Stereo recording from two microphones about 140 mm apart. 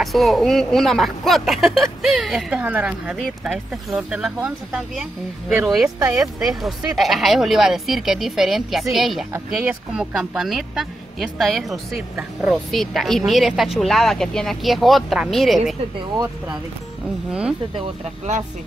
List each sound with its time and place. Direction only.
0.0 s a woman's voice: centre (ahead or behind)
5.9 s speech: 25° right (ahead or behind)
6.4 s speech: centre (ahead or behind)
17.3 s a woman's voice: 5° right (ahead or behind)